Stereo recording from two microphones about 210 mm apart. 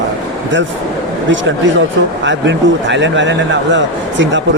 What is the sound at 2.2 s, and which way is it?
A man's voice, 60° right (ahead or behind).